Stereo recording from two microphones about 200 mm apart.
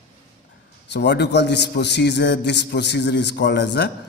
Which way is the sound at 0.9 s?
55° left (ahead or behind).